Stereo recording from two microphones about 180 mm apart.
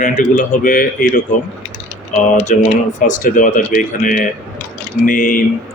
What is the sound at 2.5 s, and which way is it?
Speech, 45° left (ahead or behind).